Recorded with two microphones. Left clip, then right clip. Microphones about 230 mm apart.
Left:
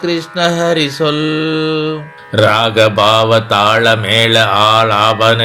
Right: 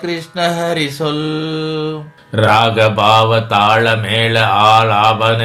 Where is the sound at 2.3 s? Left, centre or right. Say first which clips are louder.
Left 1 dB; left.